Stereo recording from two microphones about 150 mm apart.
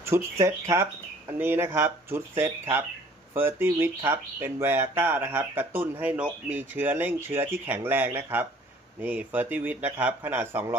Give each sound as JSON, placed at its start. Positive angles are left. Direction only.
{"t": 0.0, "sound": "speech", "side_deg": -20}